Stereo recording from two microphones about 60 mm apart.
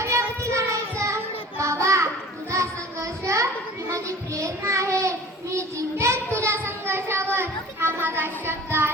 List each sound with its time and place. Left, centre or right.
0.0 s child singing: right
2.5 s music: right
3.8 s child singing: right
7.3 s a sound: right